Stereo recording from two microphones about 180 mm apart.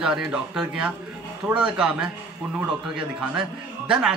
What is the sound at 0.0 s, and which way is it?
A man's voice, 5° right (ahead or behind).